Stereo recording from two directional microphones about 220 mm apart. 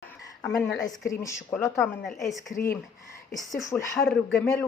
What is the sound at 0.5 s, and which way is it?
Speech, centre (ahead or behind).